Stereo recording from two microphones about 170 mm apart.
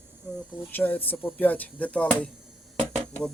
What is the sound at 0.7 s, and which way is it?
A man's voice, 10° left (ahead or behind).